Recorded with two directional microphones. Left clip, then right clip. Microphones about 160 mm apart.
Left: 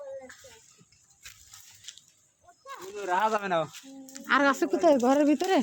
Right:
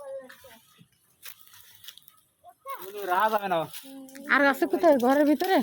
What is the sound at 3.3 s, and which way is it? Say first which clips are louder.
Speech: right 1 dB; 5° right (ahead or behind).